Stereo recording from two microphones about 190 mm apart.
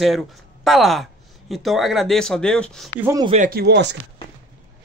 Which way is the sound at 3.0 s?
15° right (ahead or behind).